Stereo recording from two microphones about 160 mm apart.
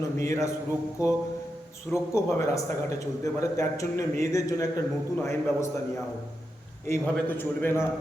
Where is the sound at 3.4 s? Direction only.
20° left (ahead or behind).